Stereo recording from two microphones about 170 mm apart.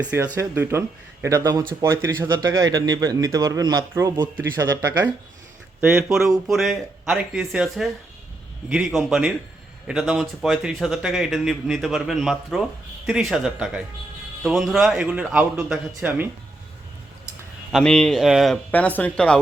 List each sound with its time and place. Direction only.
0.0 s a man's voice: 10° right (ahead or behind)
17.7 s a man's voice: centre (ahead or behind)